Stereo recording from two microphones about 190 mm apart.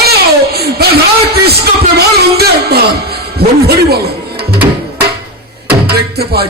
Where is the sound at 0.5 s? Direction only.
55° right (ahead or behind).